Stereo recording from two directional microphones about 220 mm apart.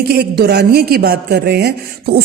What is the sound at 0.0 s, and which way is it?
A woman's voice, 45° right (ahead or behind).